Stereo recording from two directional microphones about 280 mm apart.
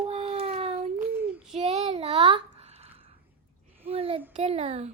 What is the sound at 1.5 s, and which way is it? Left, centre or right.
Child singing, right.